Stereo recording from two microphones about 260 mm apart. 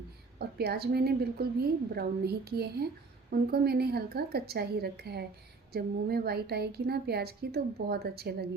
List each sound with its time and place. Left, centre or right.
0.3 s a woman's voice: right